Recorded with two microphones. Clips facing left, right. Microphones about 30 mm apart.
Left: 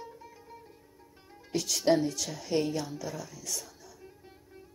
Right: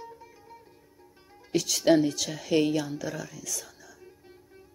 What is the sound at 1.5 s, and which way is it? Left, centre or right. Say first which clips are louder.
Speech: right 4 dB; right.